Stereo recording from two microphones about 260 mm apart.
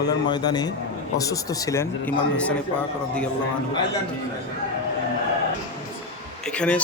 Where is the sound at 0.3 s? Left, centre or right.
Centre.